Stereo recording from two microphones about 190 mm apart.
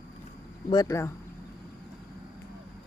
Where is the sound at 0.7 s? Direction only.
20° left (ahead or behind).